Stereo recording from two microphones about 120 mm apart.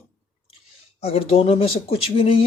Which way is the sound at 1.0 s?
55° left (ahead or behind).